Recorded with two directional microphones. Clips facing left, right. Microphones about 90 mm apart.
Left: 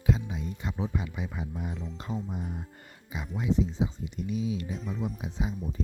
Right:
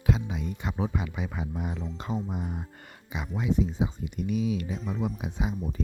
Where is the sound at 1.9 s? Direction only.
90° right.